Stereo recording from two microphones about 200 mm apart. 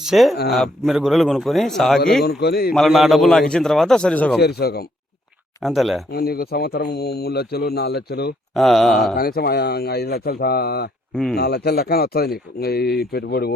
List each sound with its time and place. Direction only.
0.0 s a man's voice: centre (ahead or behind)
2.4 s speech: 50° left (ahead or behind)
2.7 s a man's voice: centre (ahead or behind)
4.4 s speech: 55° left (ahead or behind)
5.6 s a man's voice: centre (ahead or behind)
6.1 s speech: 50° left (ahead or behind)
8.5 s a man's voice: centre (ahead or behind)
9.1 s speech: 50° left (ahead or behind)
11.1 s speech: 5° left (ahead or behind)
11.3 s speech: 55° left (ahead or behind)